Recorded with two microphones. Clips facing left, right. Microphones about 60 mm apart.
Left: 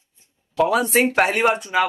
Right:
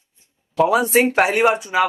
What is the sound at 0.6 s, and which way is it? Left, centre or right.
Speech, centre.